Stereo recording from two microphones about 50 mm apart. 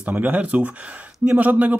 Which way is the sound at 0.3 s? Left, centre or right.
Right.